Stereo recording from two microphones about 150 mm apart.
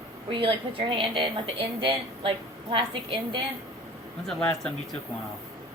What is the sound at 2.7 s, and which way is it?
Speech, 35° right (ahead or behind).